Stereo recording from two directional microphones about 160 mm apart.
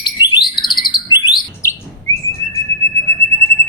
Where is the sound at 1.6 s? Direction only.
15° left (ahead or behind).